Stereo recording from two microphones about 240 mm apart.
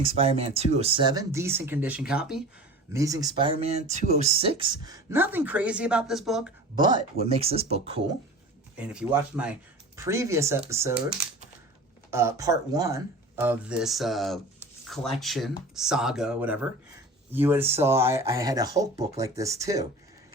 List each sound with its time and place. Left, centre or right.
0.0 s speech: right; by 2.4 s centre
2.9 s speech: centre
6.7 s speech: centre
8.7 s speech: centre
12.1 s speech: centre
14.8 s a sound: centre
15.2 s speech: centre